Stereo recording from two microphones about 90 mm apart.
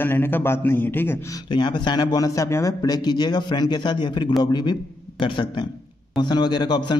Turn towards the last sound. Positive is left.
turn(degrees=55)  # may be behind; listen again after turning